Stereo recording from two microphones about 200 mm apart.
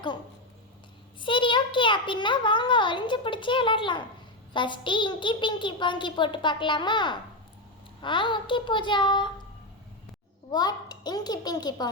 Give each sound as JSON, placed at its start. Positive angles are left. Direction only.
{"t": 1.2, "sound": "a child's voice", "side_deg": 25}
{"t": 10.5, "sound": "a child's voice", "side_deg": 20}